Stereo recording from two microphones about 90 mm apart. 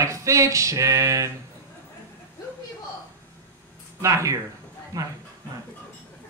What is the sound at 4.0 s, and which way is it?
Speech, 35° right (ahead or behind).